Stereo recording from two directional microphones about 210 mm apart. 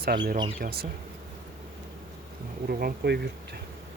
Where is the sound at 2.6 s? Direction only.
45° right (ahead or behind).